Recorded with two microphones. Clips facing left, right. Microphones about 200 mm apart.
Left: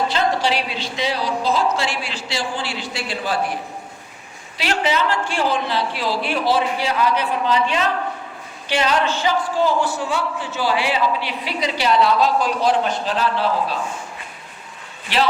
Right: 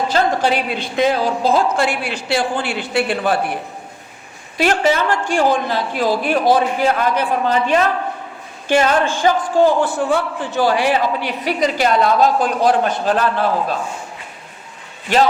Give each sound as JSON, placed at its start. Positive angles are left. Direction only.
{"t": 0.1, "sound": "a woman's voice", "side_deg": -50}
{"t": 15.1, "sound": "a woman's voice", "side_deg": -45}